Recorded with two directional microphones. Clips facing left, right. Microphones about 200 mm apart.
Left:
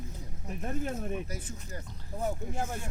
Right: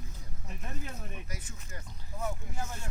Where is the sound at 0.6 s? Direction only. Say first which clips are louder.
Left 9 dB; 45° left (ahead or behind).